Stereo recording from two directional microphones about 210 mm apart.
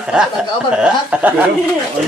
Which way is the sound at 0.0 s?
5° right (ahead or behind).